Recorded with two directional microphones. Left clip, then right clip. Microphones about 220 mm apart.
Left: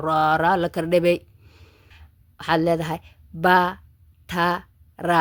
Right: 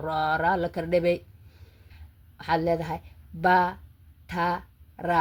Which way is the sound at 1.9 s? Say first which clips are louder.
Left 4 dB; 35° left (ahead or behind).